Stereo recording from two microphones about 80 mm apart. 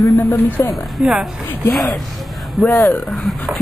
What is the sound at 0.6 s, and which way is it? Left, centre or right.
Speech, left.